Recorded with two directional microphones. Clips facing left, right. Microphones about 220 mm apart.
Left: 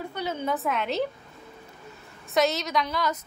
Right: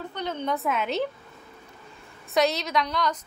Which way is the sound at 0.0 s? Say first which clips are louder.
Even; 10° left (ahead or behind).